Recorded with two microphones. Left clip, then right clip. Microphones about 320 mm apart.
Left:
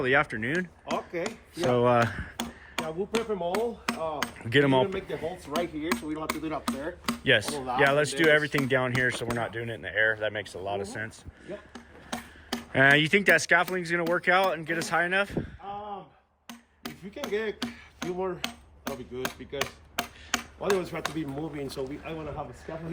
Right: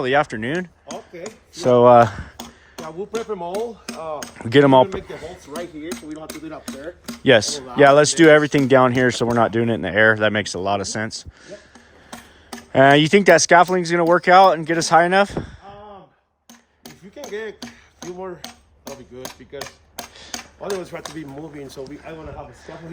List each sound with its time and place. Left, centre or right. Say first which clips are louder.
0.0 s speech: right 6 dB; centre
0.9 s a sound: left 2 dB; left
1.5 s speech: right 12 dB; centre
2.8 s speech: right 4 dB; right
5.5 s speech: left 1 dB; centre
7.3 s speech: right 9 dB; centre
11.7 s tick-tock: left 1 dB; left
12.7 s speech: right 8 dB; centre
16.5 s hammer: left 2 dB; left
19.1 s speech: left 2 dB; centre
20.6 s speech: right 1 dB; centre